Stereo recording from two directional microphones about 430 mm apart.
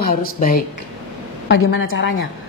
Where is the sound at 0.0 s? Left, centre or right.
Centre.